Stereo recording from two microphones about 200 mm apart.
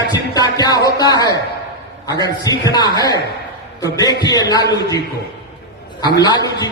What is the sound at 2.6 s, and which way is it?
A man's voice, 20° left (ahead or behind).